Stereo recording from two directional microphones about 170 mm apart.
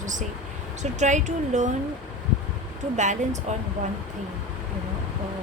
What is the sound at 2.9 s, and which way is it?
Speech, 45° right (ahead or behind).